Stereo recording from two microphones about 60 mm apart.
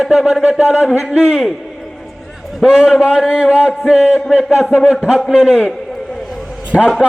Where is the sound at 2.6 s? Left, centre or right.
Centre.